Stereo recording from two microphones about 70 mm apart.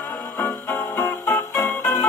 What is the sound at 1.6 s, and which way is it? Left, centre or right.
Jingle bell, centre.